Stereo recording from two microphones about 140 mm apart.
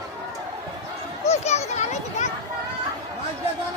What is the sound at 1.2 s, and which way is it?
Children playing, 50° left (ahead or behind).